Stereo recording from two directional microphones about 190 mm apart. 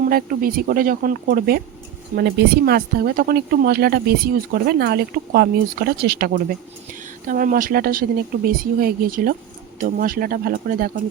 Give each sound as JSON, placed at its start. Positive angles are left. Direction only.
{"t": 0.1, "sound": "speech", "side_deg": -50}